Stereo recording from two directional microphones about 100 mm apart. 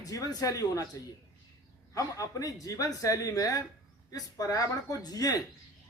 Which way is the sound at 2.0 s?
35° left (ahead or behind).